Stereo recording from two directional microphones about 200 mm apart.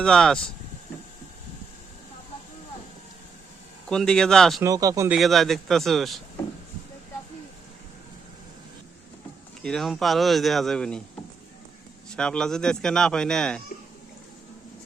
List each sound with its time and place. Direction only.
0.0 s speech: 5° left (ahead or behind)
3.8 s speech: 5° left (ahead or behind)
4.6 s speech: 15° right (ahead or behind)
5.1 s speech: centre (ahead or behind)
9.6 s speech: centre (ahead or behind)
12.1 s speech: 5° left (ahead or behind)